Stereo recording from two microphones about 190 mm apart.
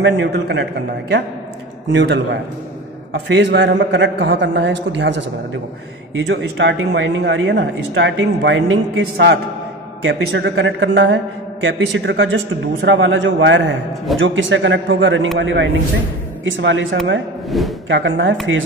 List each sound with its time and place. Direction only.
0.0 s a man's voice: 65° right (ahead or behind)
1.9 s speech: 70° right (ahead or behind)
6.1 s speech: 80° right
14.1 s a man's voice: 90° right
15.3 s a man's voice: 75° right (ahead or behind)
17.5 s speech: centre (ahead or behind)
17.8 s speech: 85° right